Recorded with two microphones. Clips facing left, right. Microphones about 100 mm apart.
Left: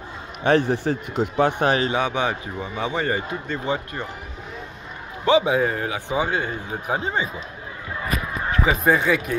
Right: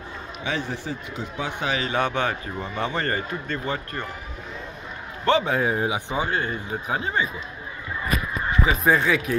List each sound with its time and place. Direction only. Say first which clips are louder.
0.4 s a man's voice: left 10 dB; 55° left (ahead or behind)
1.6 s speech: left 6 dB; 45° left (ahead or behind)
2.0 s a man's voice: left 1 dB; 10° left (ahead or behind)
5.2 s a man's voice: left 3 dB; 10° left (ahead or behind)
5.7 s speech: right 2 dB; 15° right (ahead or behind)
6.0 s a man's voice: left 2 dB; 15° left (ahead or behind)
8.8 s speech: even; centre (ahead or behind)